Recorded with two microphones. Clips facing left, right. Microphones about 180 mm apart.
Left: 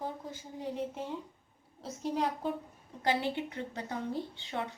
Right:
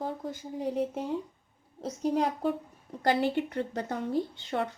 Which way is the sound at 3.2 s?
55° right (ahead or behind).